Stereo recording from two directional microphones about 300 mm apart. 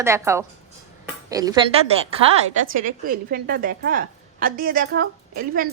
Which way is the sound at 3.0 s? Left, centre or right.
Right.